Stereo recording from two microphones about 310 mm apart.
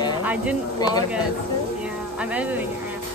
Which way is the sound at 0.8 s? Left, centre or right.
Centre.